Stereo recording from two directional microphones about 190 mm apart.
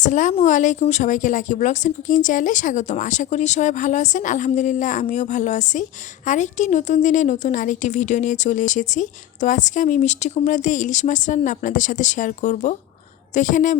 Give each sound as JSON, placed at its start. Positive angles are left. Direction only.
{"t": 0.0, "sound": "a woman's voice", "side_deg": 40}